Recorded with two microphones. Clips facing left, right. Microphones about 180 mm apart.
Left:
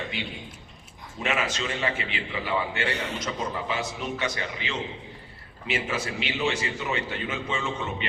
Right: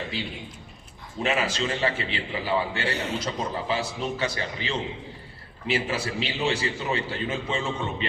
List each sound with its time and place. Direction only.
0.1 s a man's voice: 35° right (ahead or behind)